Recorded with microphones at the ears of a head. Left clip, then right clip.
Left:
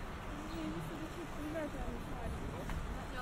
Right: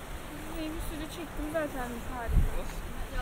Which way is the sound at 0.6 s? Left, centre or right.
Right.